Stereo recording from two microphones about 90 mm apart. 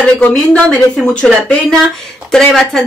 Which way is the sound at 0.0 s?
10° left (ahead or behind).